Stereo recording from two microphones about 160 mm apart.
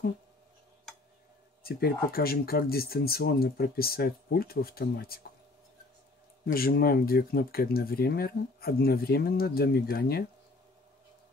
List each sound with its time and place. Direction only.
1.6 s speech: 70° left (ahead or behind)
6.4 s speech: 70° left (ahead or behind)